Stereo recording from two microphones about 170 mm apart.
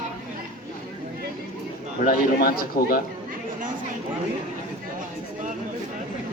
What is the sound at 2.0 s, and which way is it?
Speech, 60° left (ahead or behind).